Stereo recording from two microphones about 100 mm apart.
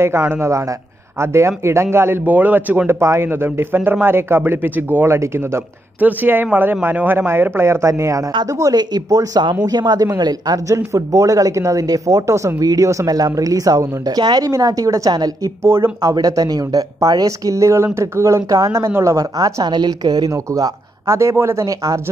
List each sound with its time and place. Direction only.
0.0 s a man's voice: 25° right (ahead or behind); by 15.5 s 40° right (ahead or behind)
15.6 s a man's voice: 25° right (ahead or behind)
16.0 s speech: 40° right (ahead or behind)
18.9 s a man's voice: 25° right (ahead or behind)
19.1 s speech: 40° right (ahead or behind)